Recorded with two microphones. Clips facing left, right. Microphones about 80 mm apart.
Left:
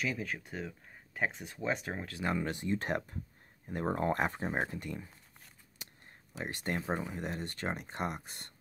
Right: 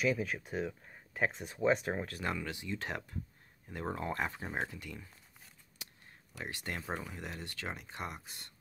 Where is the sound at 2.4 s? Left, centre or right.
Left.